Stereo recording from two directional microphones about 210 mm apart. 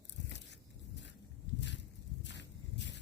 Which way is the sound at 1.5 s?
60° left (ahead or behind).